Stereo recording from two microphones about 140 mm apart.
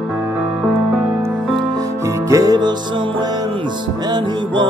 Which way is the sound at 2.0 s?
25° right (ahead or behind).